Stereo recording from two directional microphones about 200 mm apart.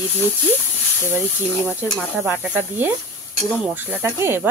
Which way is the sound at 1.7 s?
5° right (ahead or behind).